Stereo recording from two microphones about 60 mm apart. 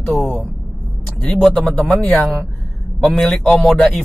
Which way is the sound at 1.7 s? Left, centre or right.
Left.